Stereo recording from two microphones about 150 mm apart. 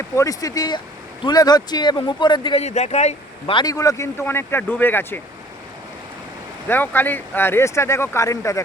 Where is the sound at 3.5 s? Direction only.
25° left (ahead or behind).